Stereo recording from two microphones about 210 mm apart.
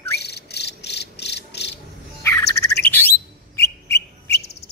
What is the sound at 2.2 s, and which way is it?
Bird, 10° left (ahead or behind).